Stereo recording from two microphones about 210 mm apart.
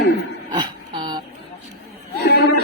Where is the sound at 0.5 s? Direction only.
20° right (ahead or behind).